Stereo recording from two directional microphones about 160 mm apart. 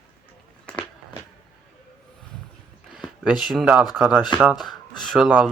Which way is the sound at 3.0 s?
Centre (ahead or behind).